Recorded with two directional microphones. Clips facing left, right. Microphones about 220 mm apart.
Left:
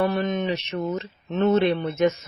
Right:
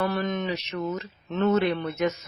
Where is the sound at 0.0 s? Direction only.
20° left (ahead or behind).